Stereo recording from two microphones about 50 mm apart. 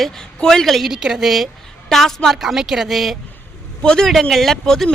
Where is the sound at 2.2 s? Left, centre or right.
Centre.